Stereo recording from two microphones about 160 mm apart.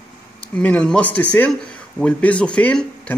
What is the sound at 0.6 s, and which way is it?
Speech, 10° left (ahead or behind).